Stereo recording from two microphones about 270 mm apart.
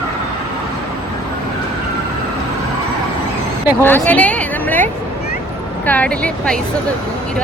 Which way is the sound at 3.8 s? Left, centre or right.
Centre.